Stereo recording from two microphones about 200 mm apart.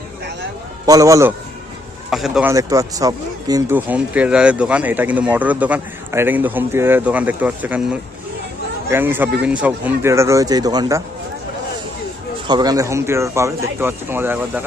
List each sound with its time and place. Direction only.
0.9 s speech: 15° right (ahead or behind)
2.0 s speech: centre (ahead or behind)
2.5 s speech: 15° right (ahead or behind)
8.9 s speech: 10° right (ahead or behind)
12.5 s speech: 20° right (ahead or behind)